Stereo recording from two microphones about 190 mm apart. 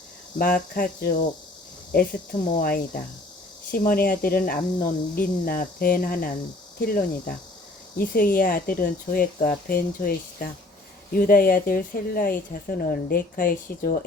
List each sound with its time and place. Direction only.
0.3 s a woman's voice: 45° left (ahead or behind)